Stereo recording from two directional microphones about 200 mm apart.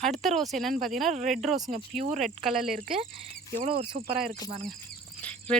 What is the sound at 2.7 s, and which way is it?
Speech, 45° right (ahead or behind).